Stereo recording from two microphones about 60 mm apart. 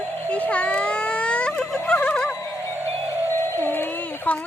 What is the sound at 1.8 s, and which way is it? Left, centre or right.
Music, left.